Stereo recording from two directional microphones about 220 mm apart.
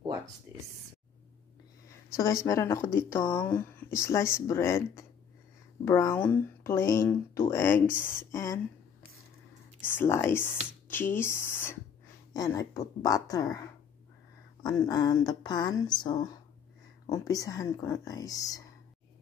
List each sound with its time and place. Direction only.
0.5 s a sound: 15° right (ahead or behind)
2.1 s speech: 15° left (ahead or behind)
10.2 s a woman's voice: 10° left (ahead or behind)